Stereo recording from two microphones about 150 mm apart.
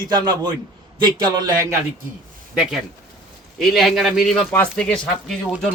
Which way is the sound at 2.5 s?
10° right (ahead or behind).